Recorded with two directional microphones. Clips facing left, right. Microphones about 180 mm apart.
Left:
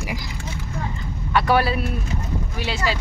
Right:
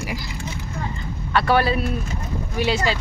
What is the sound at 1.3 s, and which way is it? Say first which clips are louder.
Speech: even; 10° left (ahead or behind).